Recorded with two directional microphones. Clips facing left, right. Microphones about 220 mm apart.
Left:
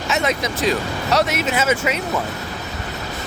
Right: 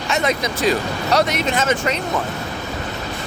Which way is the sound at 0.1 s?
Centre (ahead or behind).